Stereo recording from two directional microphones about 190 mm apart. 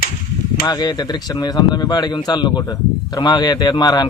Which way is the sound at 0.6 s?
20° left (ahead or behind).